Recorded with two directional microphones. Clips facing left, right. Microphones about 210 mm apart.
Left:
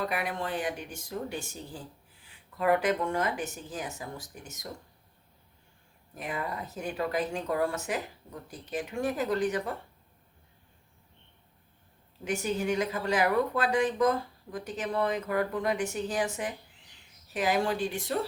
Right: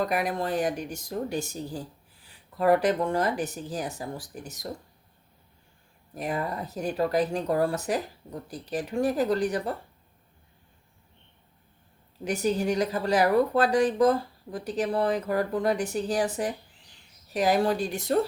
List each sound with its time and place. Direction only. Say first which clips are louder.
0.0 s speech: right 5 dB; 40° right (ahead or behind)
6.1 s speech: right 5 dB; 40° right (ahead or behind)
12.2 s speech: right 4 dB; 35° right (ahead or behind)